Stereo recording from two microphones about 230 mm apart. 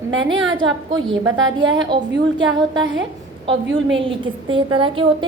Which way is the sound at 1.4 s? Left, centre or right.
Right.